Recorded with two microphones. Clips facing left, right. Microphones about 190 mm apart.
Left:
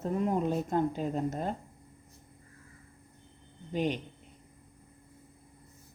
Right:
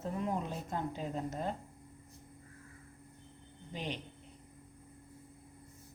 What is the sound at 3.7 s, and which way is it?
Speech, 50° left (ahead or behind).